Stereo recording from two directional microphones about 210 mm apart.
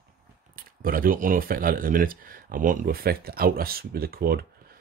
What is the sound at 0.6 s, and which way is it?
Speech, 45° right (ahead or behind).